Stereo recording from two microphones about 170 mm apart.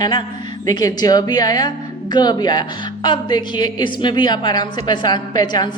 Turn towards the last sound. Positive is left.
turn(degrees=25)  # may be behind; listen again after turning